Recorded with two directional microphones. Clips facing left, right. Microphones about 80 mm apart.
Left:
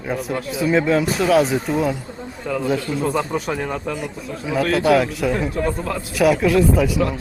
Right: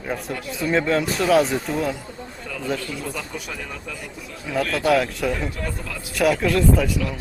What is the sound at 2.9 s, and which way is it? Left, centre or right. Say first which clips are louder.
Speech: left 9 dB; left.